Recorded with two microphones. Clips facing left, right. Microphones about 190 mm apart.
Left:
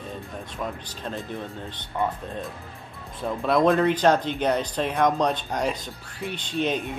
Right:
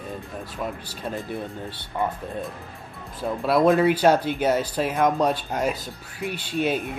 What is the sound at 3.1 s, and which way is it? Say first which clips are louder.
Speech: right 1 dB; 5° right (ahead or behind).